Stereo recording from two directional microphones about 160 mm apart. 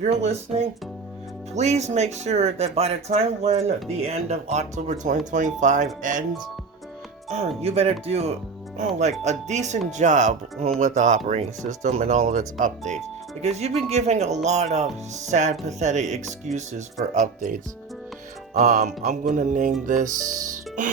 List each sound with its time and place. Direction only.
0.0 s speech: 45° right (ahead or behind)
7.3 s speech: 40° right (ahead or behind)
18.5 s speech: 65° right (ahead or behind)
18.8 s speech: 50° right (ahead or behind)